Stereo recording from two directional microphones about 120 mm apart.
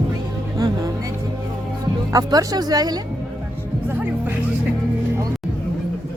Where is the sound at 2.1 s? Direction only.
30° right (ahead or behind).